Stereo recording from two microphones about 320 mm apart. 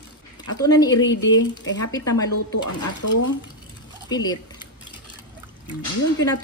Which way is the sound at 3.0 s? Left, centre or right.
Left.